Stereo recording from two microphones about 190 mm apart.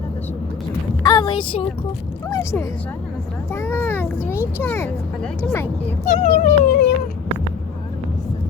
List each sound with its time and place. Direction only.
1.0 s a sound: 25° left (ahead or behind)
2.3 s a child's voice: 15° left (ahead or behind)
6.1 s speech: 40° left (ahead or behind)